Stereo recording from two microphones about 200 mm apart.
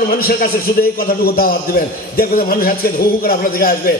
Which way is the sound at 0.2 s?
45° left (ahead or behind).